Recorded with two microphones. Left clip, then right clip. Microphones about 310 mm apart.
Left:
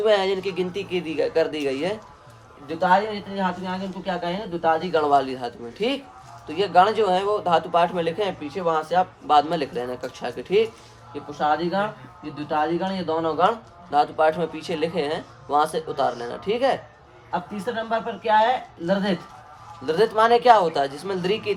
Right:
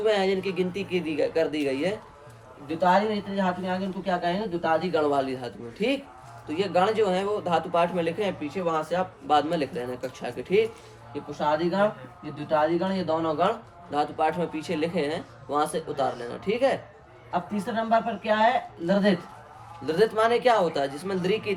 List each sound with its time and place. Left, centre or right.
0.0 s speech: centre
17.9 s speech: centre
19.8 s speech: centre